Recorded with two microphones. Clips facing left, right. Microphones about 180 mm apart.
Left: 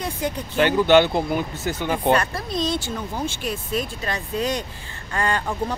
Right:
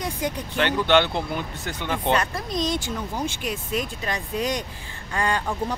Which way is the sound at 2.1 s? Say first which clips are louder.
Left 2 dB; 15° right (ahead or behind).